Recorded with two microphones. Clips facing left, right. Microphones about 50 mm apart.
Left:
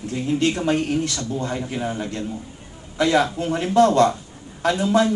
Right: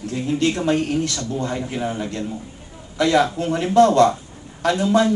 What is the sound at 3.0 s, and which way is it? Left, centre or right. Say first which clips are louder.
Speech: right 1 dB; centre.